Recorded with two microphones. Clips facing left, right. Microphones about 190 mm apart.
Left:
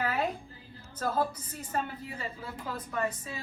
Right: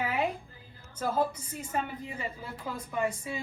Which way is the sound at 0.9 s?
10° right (ahead or behind).